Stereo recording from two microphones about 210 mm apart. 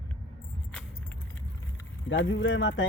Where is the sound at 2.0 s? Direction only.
65° left (ahead or behind).